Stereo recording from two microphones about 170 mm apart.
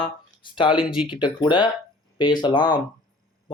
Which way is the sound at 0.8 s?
5° right (ahead or behind).